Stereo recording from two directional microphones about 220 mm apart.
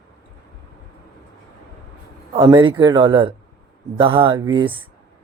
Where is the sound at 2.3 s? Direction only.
20° right (ahead or behind).